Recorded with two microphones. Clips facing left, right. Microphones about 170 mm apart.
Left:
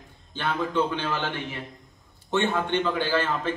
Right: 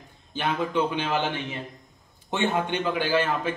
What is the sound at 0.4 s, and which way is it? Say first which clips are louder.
Speech: even; 15° right (ahead or behind).